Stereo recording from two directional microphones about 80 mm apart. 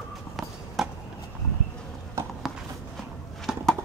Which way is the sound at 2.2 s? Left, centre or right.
Right.